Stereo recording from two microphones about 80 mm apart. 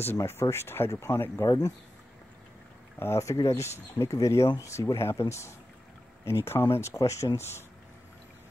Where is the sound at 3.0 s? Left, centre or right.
Left.